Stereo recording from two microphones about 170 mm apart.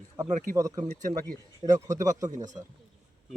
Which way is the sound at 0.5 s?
20° right (ahead or behind).